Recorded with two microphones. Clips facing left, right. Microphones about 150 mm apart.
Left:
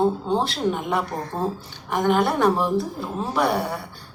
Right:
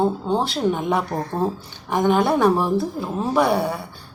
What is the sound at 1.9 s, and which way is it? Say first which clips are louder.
A woman's voice: right 2 dB; 15° right (ahead or behind).